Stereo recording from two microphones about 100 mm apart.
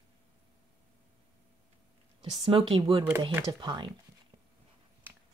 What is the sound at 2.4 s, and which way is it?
Speech, 65° right (ahead or behind).